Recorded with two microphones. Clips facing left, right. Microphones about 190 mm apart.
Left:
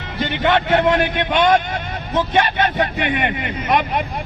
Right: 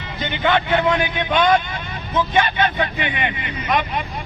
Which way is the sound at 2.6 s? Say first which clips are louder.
Left 2 dB; 50° left (ahead or behind).